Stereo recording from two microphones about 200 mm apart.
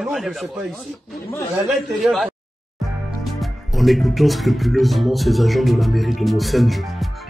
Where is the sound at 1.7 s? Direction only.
Centre (ahead or behind).